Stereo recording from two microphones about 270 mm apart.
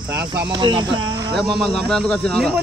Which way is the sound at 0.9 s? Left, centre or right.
Centre.